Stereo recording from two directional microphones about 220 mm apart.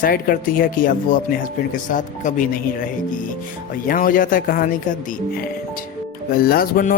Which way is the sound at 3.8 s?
40° left (ahead or behind).